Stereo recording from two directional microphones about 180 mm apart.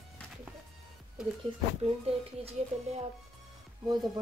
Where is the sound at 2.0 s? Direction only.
35° right (ahead or behind).